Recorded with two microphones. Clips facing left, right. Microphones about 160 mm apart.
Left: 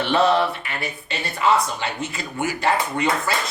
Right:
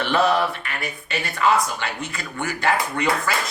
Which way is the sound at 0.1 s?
25° left (ahead or behind).